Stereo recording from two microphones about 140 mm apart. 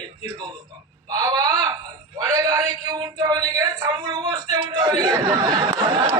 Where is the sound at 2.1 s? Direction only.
25° right (ahead or behind).